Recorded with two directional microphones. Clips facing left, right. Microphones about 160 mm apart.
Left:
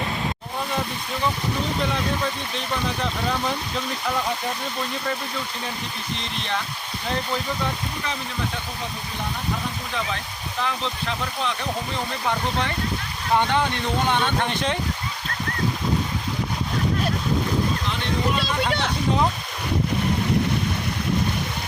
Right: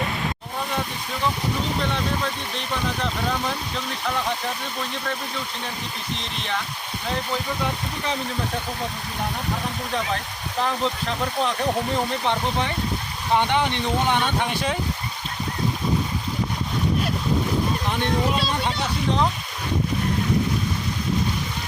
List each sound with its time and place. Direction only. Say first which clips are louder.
6.1 s speech: left 1 dB; centre (ahead or behind)
12.2 s speech: right 1 dB; 20° right (ahead or behind)